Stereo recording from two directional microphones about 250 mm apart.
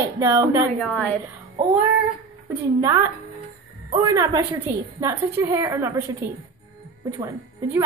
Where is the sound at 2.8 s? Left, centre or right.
Centre.